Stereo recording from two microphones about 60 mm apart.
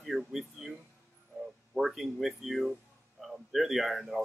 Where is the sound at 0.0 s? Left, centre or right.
Centre.